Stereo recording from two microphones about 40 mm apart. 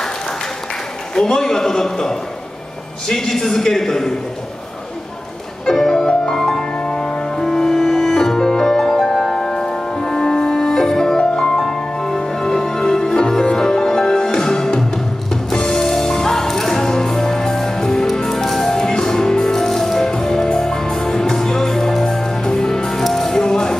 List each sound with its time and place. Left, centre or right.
1.1 s a man's voice: centre
5.7 s music: centre
7.4 s music: centre
11.6 s music: centre